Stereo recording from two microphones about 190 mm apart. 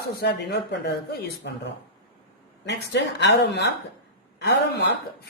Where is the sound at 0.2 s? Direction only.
65° left (ahead or behind).